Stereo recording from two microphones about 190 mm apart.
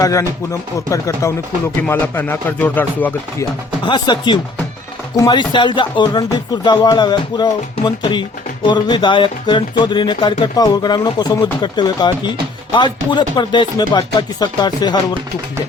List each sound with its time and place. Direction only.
0.0 s speech: 15° left (ahead or behind)
3.8 s speech: 25° left (ahead or behind)